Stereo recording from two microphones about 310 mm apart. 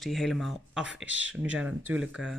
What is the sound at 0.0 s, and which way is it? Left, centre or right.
Speech, centre.